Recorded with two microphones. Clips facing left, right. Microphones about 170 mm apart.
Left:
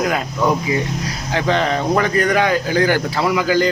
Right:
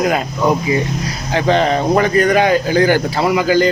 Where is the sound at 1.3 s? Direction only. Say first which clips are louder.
Right 4 dB; 30° right (ahead or behind).